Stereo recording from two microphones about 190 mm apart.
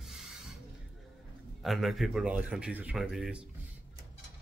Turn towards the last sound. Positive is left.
turn(degrees=-5)  # may be behind; listen again after turning